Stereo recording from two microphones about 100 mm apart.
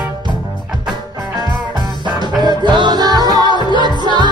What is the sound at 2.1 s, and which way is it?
Music, 45° right (ahead or behind).